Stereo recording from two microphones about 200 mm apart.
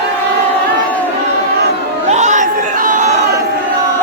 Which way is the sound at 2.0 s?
35° right (ahead or behind).